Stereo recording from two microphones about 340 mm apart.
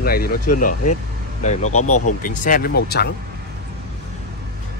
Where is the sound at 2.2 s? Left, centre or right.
Left.